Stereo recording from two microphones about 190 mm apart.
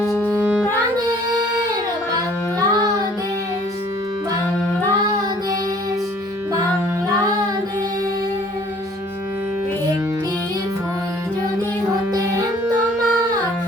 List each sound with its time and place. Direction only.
0.1 s music: 5° left (ahead or behind)
2.6 s child singing: 20° right (ahead or behind)
12.1 s music: 20° right (ahead or behind)